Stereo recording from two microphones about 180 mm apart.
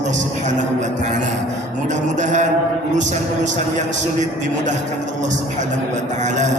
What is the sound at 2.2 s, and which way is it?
Speech, 45° right (ahead or behind).